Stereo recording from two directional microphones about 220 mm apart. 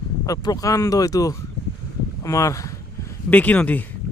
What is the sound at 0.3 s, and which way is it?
Speech, 15° left (ahead or behind).